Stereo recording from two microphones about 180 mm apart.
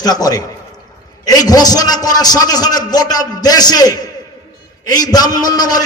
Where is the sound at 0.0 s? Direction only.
20° left (ahead or behind).